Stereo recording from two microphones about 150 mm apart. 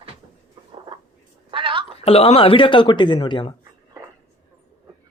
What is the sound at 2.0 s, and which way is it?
Speech, 40° left (ahead or behind).